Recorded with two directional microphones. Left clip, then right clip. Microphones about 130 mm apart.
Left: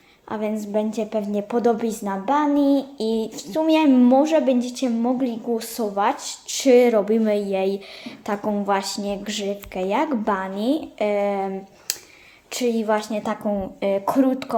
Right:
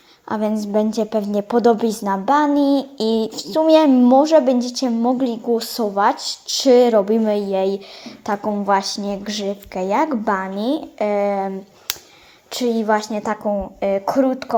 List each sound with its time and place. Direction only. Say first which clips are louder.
0.3 s a woman's voice: right 5 dB; 45° right (ahead or behind); by 14.5 s 10° right (ahead or behind)